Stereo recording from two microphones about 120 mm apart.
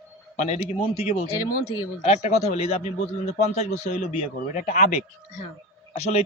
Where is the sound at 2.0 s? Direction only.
65° left (ahead or behind).